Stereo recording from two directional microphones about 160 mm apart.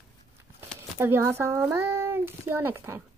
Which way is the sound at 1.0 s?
15° right (ahead or behind).